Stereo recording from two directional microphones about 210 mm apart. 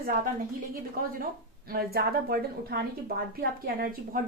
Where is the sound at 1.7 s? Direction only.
45° right (ahead or behind).